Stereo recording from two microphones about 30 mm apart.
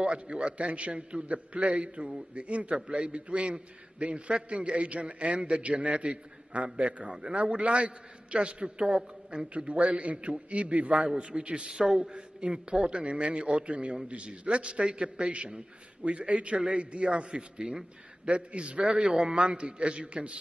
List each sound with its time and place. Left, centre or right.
0.0 s a man's voice: right
0.6 s a man's voice: right
5.6 s a man's voice: right
9.8 s a man's voice: right
11.7 s a man's voice: right
12.1 s a man's voice: right
16.0 s a man's voice: right
18.2 s a man's voice: right
18.9 s a man's voice: right
19.3 s a man's voice: right